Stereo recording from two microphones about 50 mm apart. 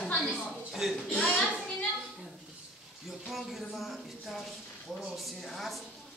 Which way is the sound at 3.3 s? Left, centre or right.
Centre.